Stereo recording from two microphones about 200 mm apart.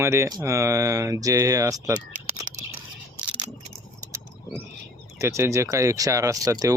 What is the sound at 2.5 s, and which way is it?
Scissors, 40° right (ahead or behind).